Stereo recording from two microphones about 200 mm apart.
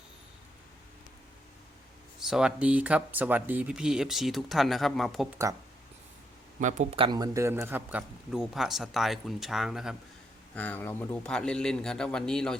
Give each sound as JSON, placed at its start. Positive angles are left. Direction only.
{"t": 2.1, "sound": "speech", "side_deg": -5}
{"t": 6.6, "sound": "speech", "side_deg": -35}
{"t": 7.0, "sound": "speech", "side_deg": -20}